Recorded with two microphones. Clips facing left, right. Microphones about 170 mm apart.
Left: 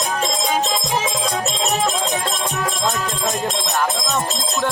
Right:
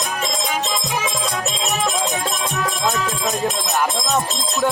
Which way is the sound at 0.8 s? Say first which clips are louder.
Left 2 dB; 30° left (ahead or behind).